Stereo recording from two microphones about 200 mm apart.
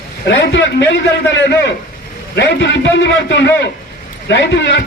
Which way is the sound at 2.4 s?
60° left (ahead or behind).